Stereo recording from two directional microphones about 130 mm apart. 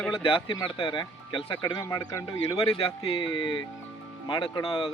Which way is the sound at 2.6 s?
50° left (ahead or behind).